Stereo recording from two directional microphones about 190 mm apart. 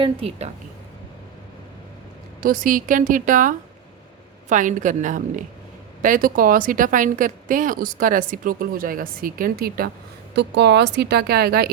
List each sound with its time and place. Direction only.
0.0 s a woman's voice: 30° right (ahead or behind)
2.4 s a woman's voice: 45° right (ahead or behind)
10.3 s a woman's voice: 65° right (ahead or behind)